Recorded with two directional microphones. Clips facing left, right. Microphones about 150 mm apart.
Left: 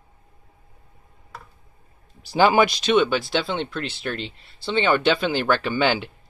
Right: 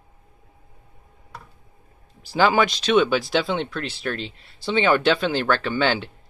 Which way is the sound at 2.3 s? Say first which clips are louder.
Left 2 dB; 15° left (ahead or behind).